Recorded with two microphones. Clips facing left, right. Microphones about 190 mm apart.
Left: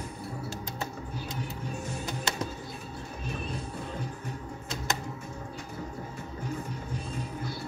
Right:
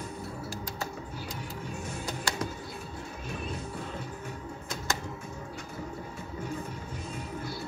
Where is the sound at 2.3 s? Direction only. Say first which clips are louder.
Even; 20° left (ahead or behind).